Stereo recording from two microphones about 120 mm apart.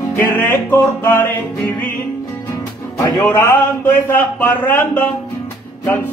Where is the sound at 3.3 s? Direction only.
25° left (ahead or behind).